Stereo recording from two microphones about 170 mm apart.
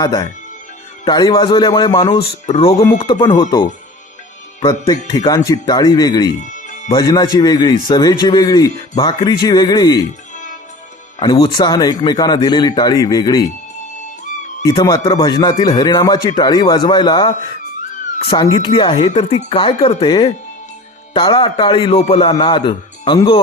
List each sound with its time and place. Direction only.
0.0 s speech: 25° left (ahead or behind)
4.6 s speech: 25° left (ahead or behind)
6.4 s music: 45° left (ahead or behind)
6.9 s speech: 20° left (ahead or behind)
10.3 s music: 50° left (ahead or behind)
11.2 s speech: 25° left (ahead or behind)
14.6 s speech: 25° left (ahead or behind)